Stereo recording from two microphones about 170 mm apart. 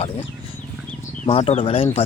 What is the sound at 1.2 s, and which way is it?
Speech, 40° left (ahead or behind).